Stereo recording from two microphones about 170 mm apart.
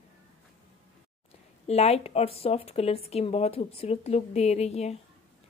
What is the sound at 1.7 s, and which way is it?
A woman's voice, 40° left (ahead or behind).